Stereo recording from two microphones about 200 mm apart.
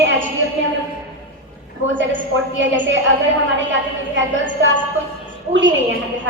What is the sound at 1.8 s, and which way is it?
A woman's voice, 65° right (ahead or behind).